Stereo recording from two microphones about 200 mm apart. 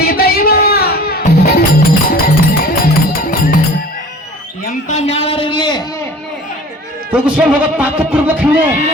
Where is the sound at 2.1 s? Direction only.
50° left (ahead or behind).